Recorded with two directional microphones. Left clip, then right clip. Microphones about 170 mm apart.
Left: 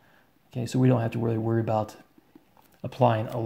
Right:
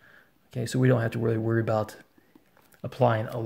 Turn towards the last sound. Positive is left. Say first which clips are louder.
# left 1 dB
turn(degrees=-10)  # may be behind; listen again after turning